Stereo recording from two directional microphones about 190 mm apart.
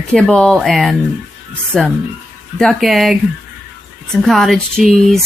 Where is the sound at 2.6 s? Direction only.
Centre (ahead or behind).